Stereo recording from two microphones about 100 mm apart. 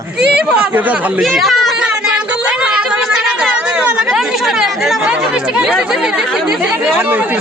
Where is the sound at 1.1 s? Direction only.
Centre (ahead or behind).